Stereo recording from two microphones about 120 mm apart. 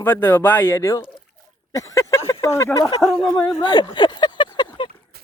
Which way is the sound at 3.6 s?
35° left (ahead or behind).